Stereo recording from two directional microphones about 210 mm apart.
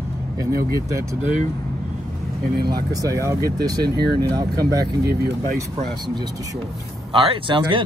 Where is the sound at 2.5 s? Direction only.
50° right (ahead or behind).